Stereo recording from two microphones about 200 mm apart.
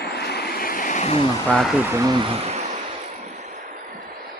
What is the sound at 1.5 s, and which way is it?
Speech, centre (ahead or behind).